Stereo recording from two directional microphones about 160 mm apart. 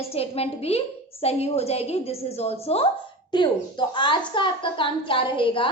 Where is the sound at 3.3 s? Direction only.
30° left (ahead or behind).